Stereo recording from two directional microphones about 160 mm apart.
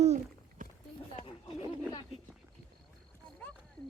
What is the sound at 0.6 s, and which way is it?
Clip-clop, 55° right (ahead or behind).